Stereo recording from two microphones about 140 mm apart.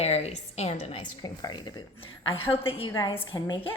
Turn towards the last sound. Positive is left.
turn(degrees=30)  # may be behind; listen again after turning